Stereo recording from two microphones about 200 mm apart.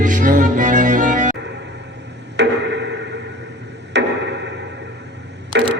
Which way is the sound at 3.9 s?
60° right (ahead or behind).